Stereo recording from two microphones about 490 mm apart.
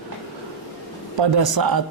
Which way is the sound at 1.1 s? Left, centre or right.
Right.